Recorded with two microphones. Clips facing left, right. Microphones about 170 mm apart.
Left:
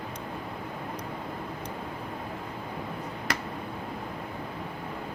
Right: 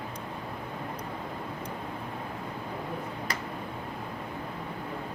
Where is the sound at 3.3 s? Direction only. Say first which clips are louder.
Left 5 dB; 75° left (ahead or behind).